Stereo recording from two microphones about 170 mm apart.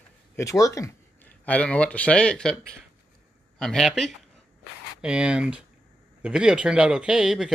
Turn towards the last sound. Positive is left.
turn(degrees=0)  # may be behind; listen again after turning